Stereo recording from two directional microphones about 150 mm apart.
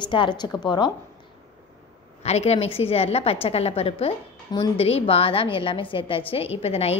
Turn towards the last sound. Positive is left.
turn(degrees=40)  # may be behind; listen again after turning